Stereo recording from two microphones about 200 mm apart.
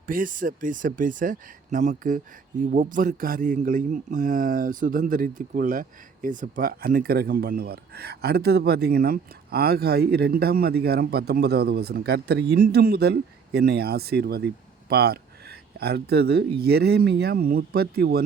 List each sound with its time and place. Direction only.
0.1 s speech: 40° right (ahead or behind)